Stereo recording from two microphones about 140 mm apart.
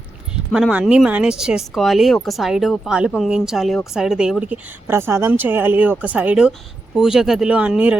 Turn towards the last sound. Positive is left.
turn(degrees=-10)  # may be behind; listen again after turning